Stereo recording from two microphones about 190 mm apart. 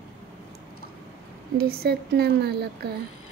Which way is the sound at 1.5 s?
55° right (ahead or behind).